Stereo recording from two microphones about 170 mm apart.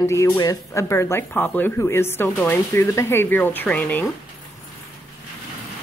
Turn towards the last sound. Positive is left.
turn(degrees=10)  # may be behind; listen again after turning